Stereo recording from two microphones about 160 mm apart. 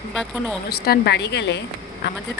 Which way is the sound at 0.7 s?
75° left (ahead or behind).